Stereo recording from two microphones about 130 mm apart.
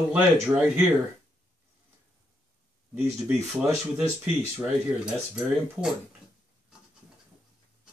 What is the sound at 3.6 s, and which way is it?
Speech, 20° right (ahead or behind).